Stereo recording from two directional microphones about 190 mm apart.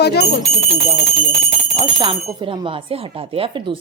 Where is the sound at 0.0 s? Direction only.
60° left (ahead or behind).